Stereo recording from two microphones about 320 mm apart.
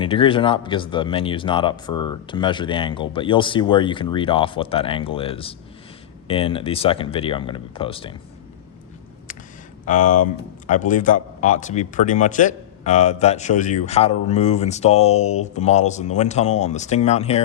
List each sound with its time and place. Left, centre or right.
0.0 s speech: centre
9.8 s speech: left